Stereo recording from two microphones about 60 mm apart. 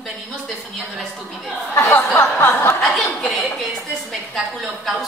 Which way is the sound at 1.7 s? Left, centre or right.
Left.